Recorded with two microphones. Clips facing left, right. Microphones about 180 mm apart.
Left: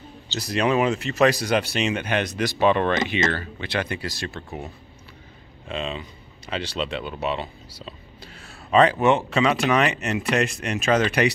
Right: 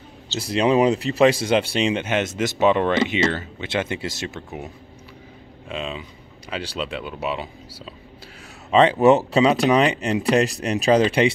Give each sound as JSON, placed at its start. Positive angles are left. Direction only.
{"t": 0.4, "sound": "speech", "side_deg": -25}
{"t": 5.7, "sound": "speech", "side_deg": -5}
{"t": 8.6, "sound": "speech", "side_deg": -25}